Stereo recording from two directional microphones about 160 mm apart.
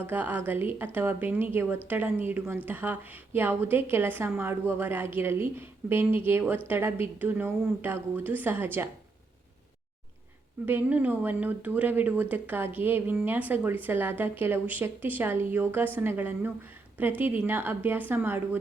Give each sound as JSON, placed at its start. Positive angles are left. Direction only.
{"t": 0.0, "sound": "speech", "side_deg": -10}
{"t": 10.7, "sound": "speech", "side_deg": -10}